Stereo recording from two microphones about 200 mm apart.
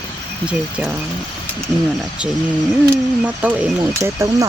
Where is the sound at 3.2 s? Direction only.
5° right (ahead or behind).